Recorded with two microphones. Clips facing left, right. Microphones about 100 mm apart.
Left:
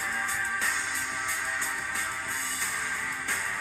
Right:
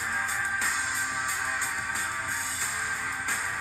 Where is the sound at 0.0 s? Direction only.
15° right (ahead or behind).